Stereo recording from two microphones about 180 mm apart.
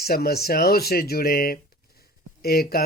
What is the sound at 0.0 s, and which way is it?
Speech, 60° left (ahead or behind).